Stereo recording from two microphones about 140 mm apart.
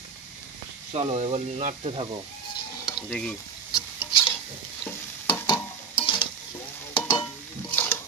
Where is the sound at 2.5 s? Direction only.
30° left (ahead or behind).